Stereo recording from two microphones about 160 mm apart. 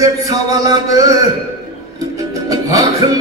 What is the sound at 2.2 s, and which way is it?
Music, 20° right (ahead or behind).